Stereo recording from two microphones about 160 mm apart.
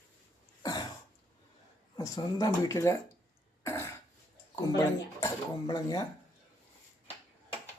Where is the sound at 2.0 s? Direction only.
20° left (ahead or behind).